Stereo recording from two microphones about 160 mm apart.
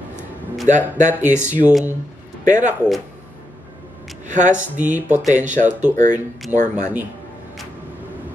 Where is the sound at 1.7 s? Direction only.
5° right (ahead or behind).